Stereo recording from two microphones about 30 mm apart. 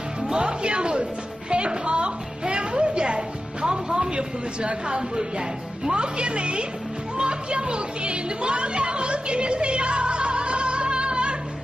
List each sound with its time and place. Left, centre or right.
0.3 s a woman's voice: right
7.2 s music: right